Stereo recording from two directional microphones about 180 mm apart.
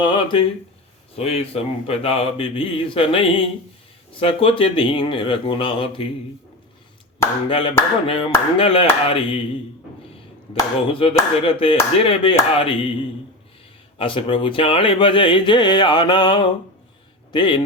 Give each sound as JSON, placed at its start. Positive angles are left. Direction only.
{"t": 0.0, "sound": "speech", "side_deg": 25}
{"t": 7.5, "sound": "speech", "side_deg": 30}
{"t": 11.0, "sound": "speech", "side_deg": 30}
{"t": 14.0, "sound": "speech", "side_deg": 30}